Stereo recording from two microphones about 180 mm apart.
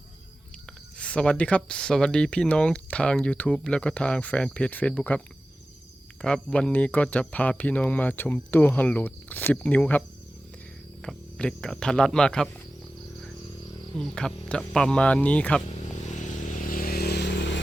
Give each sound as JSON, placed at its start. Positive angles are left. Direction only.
{"t": 0.9, "sound": "speech", "side_deg": 5}
{"t": 6.2, "sound": "speech", "side_deg": 5}
{"t": 11.0, "sound": "speech", "side_deg": 5}
{"t": 13.9, "sound": "speech", "side_deg": 5}
{"t": 16.0, "sound": "vehicle", "side_deg": 45}